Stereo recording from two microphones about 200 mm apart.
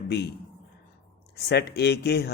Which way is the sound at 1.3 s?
55° left (ahead or behind).